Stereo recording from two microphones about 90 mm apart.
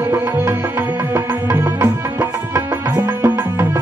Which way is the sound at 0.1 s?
25° right (ahead or behind).